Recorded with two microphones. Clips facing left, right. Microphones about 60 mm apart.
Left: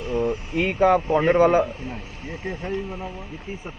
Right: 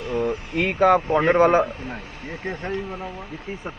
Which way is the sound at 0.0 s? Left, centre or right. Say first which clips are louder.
Even; right.